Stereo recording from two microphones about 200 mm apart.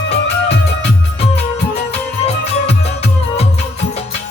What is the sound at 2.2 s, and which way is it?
Music, 30° left (ahead or behind).